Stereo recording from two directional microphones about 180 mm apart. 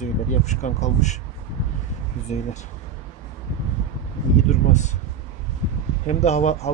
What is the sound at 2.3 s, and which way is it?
Speech, 40° left (ahead or behind).